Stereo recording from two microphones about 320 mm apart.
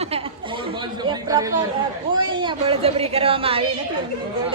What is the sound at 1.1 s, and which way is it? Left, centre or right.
A man's voice, centre.